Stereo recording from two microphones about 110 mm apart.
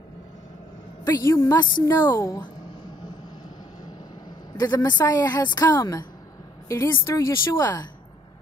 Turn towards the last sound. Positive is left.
turn(degrees=30)  # may be behind; listen again after turning